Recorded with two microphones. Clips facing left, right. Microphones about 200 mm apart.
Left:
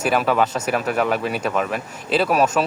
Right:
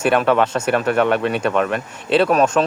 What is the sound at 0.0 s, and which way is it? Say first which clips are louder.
Speech: right 3 dB; centre (ahead or behind).